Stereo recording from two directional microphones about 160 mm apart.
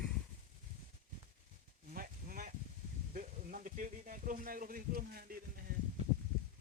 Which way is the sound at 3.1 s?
55° right (ahead or behind).